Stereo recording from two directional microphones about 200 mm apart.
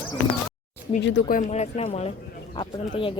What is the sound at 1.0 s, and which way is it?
Speech, 60° left (ahead or behind).